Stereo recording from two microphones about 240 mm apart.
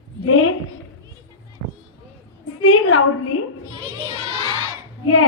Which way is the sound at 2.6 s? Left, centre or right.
Left.